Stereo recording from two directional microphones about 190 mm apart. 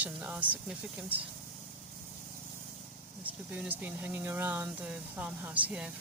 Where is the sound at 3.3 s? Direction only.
10° right (ahead or behind).